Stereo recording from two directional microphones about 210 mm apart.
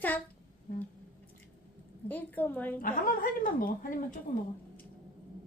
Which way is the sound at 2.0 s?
10° left (ahead or behind).